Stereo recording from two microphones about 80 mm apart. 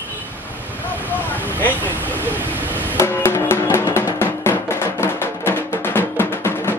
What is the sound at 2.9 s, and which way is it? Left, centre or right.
Music, left.